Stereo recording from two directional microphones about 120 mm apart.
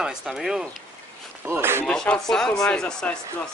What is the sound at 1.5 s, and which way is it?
Speech, 20° right (ahead or behind).